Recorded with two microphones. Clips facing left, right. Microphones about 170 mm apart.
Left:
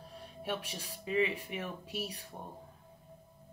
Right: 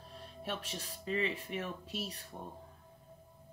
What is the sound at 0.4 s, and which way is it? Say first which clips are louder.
Speech: left 2 dB; 10° left (ahead or behind).